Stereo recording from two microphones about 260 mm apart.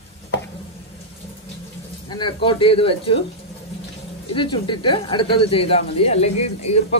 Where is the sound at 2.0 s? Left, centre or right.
Centre.